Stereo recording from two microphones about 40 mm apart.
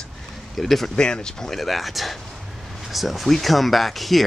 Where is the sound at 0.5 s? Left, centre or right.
Centre.